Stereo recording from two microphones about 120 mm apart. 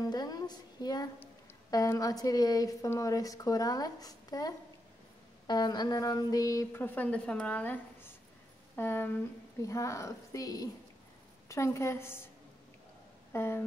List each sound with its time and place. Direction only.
0.0 s a woman's voice: 35° left (ahead or behind)
6.8 s a woman's voice: 10° left (ahead or behind)
13.3 s a woman's voice: 20° left (ahead or behind)